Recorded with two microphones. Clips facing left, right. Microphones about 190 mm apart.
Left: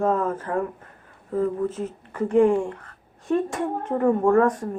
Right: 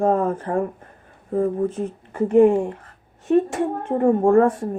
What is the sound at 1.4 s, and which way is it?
Speech, 55° right (ahead or behind).